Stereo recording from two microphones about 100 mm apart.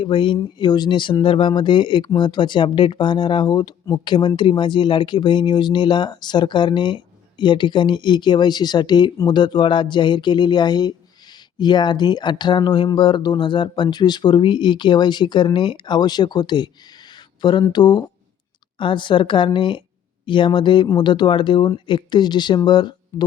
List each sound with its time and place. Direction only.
0.0 s a woman's voice: 55° left (ahead or behind)